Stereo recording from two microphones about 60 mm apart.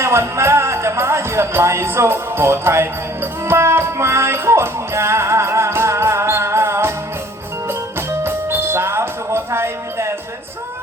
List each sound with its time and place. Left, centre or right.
0.0 s speech: right
3.4 s music: right